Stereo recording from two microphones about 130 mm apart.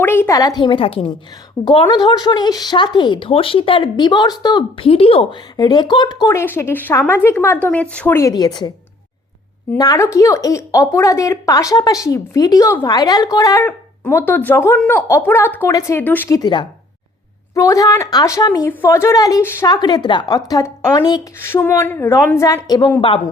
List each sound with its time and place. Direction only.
0.0 s speech: 15° left (ahead or behind); by 5.4 s 45° left (ahead or behind)
5.5 s speech: 35° left (ahead or behind)
6.3 s a woman's voice: 20° left (ahead or behind)
8.3 s speech: 30° left (ahead or behind)
9.7 s a woman's voice: 30° left (ahead or behind)
13.6 s a woman's voice: 15° left (ahead or behind)
16.3 s a woman's voice: 35° left (ahead or behind)
19.6 s speech: 30° left (ahead or behind)
21.3 s a woman's voice: 20° left (ahead or behind); by 23.2 s 40° left (ahead or behind)